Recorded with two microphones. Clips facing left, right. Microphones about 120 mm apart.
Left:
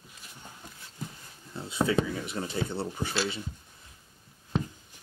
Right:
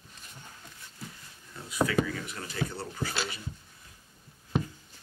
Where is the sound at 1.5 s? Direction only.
25° left (ahead or behind).